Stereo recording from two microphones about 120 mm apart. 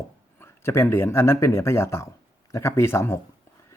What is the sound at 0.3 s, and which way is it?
Speech, 20° left (ahead or behind).